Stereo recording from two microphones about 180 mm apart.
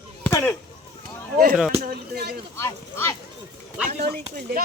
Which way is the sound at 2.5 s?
15° left (ahead or behind).